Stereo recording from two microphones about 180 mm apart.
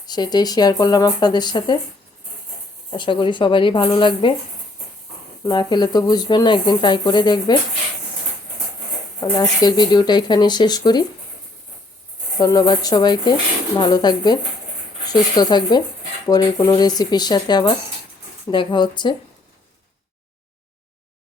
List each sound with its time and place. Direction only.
0.0 s speech: 20° left (ahead or behind)
2.9 s speech: 25° left (ahead or behind)
5.5 s speech: 25° left (ahead or behind)
9.2 s speech: 20° left (ahead or behind)
12.4 s speech: 20° left (ahead or behind)